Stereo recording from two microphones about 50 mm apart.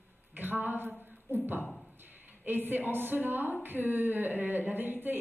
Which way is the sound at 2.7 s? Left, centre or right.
Right.